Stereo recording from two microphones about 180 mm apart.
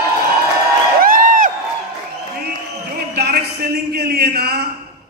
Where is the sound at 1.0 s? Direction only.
50° right (ahead or behind).